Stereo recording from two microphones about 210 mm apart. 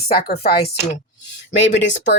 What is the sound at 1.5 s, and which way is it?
Speech, 60° left (ahead or behind).